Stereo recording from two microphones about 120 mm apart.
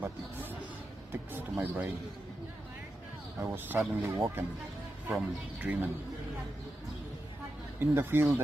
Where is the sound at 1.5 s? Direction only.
15° right (ahead or behind).